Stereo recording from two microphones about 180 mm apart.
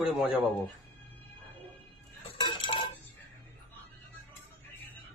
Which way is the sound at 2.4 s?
25° left (ahead or behind).